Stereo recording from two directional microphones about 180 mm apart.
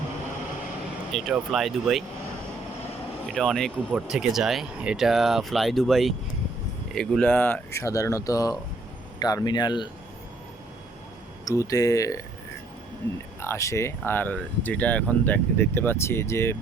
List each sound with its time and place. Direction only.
1.1 s speech: centre (ahead or behind)
3.2 s speech: centre (ahead or behind); by 9.9 s 25° left (ahead or behind)
11.4 s speech: 20° left (ahead or behind)
13.4 s speech: 15° left (ahead or behind)